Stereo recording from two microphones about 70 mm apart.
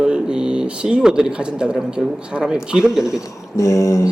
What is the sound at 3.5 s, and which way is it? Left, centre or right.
Speech, left.